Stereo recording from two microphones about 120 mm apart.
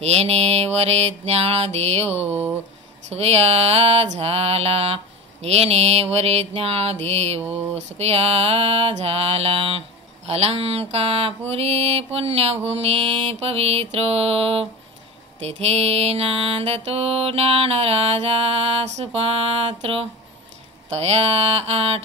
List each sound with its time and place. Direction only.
0.0 s mantra: 60° right (ahead or behind)
2.2 s speech: 15° right (ahead or behind)
3.1 s mantra: 60° right (ahead or behind)